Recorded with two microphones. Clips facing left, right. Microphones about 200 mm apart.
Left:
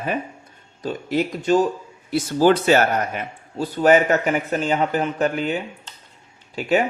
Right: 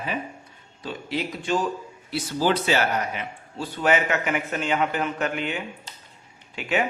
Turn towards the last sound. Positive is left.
turn(degrees=35)  # may be behind; listen again after turning